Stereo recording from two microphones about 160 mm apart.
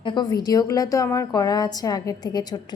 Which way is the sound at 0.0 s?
30° left (ahead or behind).